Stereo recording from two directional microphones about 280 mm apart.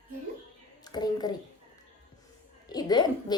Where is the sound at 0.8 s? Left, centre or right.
Centre.